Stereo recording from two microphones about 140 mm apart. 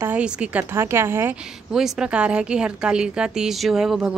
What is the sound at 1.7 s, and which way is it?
A woman's voice, 5° right (ahead or behind).